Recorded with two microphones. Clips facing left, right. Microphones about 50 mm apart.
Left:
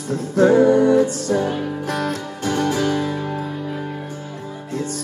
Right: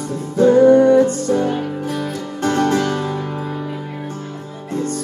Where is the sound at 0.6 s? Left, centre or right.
Right.